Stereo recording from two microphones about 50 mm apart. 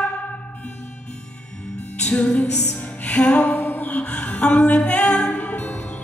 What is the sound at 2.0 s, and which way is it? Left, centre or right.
Music, left.